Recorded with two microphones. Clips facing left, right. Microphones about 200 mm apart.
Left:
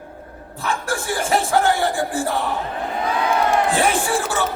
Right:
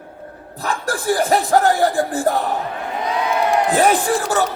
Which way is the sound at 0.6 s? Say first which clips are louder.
Right 2 dB; 40° right (ahead or behind).